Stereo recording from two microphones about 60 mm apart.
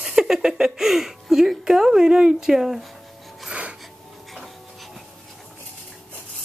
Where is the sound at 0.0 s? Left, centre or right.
Centre.